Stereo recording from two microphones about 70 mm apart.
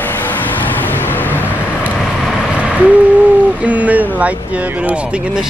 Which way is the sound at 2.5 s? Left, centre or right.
Centre.